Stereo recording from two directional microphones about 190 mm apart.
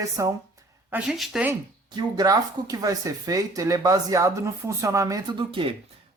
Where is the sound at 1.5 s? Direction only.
20° right (ahead or behind).